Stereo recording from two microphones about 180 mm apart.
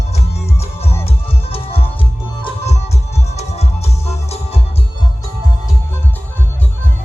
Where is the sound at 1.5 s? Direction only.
30° left (ahead or behind).